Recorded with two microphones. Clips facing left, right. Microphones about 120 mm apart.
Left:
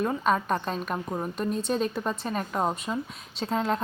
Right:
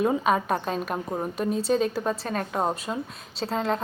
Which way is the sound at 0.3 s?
5° right (ahead or behind).